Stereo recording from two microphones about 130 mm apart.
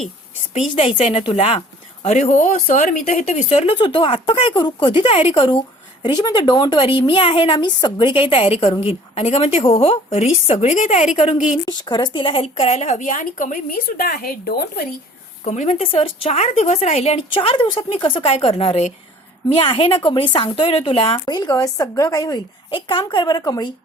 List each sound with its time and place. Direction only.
0.8 s speech: 45° left (ahead or behind)
2.0 s speech: 65° left (ahead or behind)
3.2 s speech: 55° left (ahead or behind)
11.6 s speech: 35° left (ahead or behind); by 14.0 s 90° left
15.4 s speech: 65° left (ahead or behind)
15.9 s a woman's voice: 45° left (ahead or behind)
21.2 s a woman's voice: 30° left (ahead or behind)